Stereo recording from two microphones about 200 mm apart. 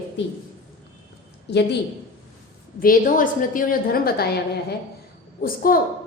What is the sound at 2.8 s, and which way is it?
A woman's voice, 45° left (ahead or behind).